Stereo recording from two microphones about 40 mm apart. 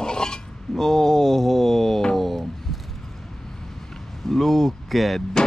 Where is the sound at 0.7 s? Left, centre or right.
Centre.